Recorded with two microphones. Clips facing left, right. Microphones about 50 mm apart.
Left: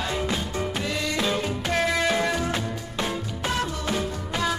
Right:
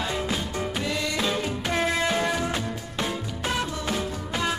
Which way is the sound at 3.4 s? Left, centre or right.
Centre.